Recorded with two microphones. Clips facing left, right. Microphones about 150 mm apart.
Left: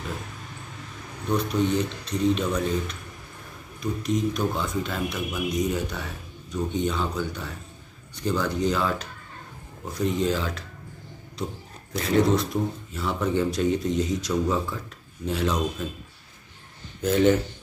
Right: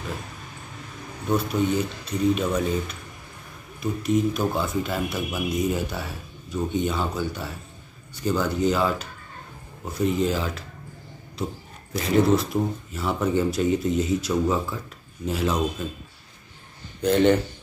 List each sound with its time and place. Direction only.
1.3 s speech: 5° right (ahead or behind)
11.9 s speech: 5° right (ahead or behind)
17.0 s speech: 5° left (ahead or behind)